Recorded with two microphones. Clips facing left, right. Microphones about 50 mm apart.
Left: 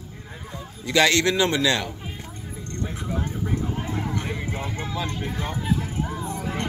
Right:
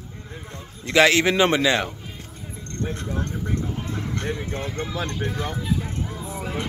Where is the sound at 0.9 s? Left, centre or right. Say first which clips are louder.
Right 2 dB; centre.